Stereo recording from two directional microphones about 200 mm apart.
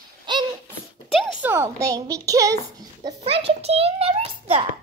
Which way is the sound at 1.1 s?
Centre (ahead or behind).